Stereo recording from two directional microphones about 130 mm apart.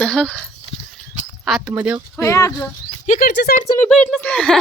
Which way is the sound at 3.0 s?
70° left (ahead or behind).